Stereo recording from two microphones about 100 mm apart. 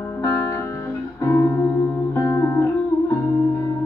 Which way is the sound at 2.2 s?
35° left (ahead or behind).